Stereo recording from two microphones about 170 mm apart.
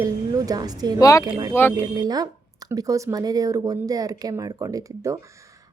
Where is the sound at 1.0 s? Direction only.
20° left (ahead or behind).